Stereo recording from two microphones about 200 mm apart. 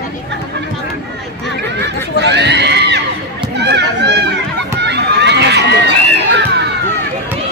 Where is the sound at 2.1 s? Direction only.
60° right (ahead or behind).